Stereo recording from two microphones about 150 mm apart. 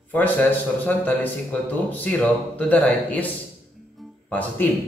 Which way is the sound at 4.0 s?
10° left (ahead or behind).